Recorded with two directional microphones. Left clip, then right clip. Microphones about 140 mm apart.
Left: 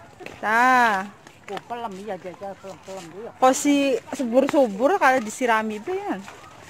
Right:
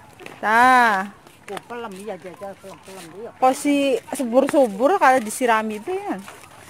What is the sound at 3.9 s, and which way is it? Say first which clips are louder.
Speech: right 2 dB; 15° right (ahead or behind).